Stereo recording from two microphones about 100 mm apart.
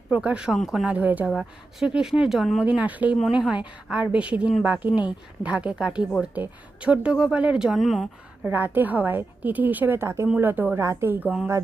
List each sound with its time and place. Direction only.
0.1 s speech: 10° right (ahead or behind)
8.4 s a woman's voice: 20° right (ahead or behind)